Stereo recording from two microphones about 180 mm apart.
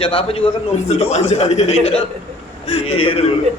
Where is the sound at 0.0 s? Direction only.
30° left (ahead or behind).